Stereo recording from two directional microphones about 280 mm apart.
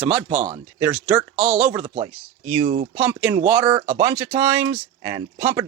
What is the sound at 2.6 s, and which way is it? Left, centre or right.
Speech, right.